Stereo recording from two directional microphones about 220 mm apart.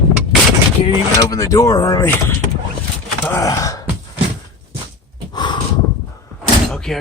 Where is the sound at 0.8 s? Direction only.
15° left (ahead or behind).